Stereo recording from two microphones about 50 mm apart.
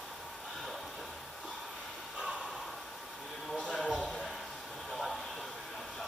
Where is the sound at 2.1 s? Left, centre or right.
Centre.